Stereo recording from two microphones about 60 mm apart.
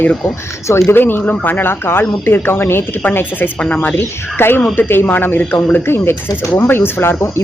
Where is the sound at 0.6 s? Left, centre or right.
Left.